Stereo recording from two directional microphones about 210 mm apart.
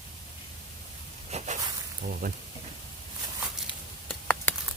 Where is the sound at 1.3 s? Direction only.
30° right (ahead or behind).